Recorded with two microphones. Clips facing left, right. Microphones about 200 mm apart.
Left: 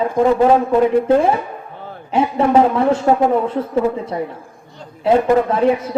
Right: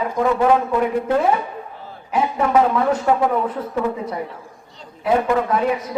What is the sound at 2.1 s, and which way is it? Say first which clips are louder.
Speech: left 4 dB; 30° left (ahead or behind).